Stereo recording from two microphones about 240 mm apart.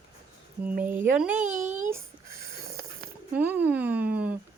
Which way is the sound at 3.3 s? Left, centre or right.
Centre.